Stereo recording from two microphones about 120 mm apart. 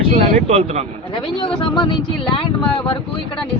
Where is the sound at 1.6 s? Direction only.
40° left (ahead or behind).